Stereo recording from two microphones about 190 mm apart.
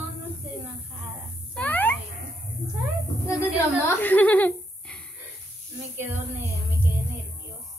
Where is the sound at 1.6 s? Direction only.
10° left (ahead or behind).